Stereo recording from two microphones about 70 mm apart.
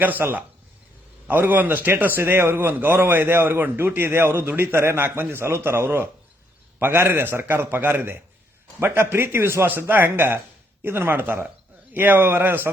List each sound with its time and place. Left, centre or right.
0.0 s a man's voice: right